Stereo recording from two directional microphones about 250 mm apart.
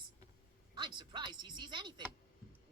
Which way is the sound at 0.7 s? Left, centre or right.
Centre.